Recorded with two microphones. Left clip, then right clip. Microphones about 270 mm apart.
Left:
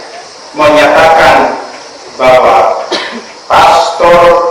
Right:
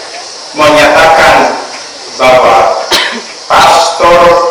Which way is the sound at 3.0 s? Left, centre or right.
Centre.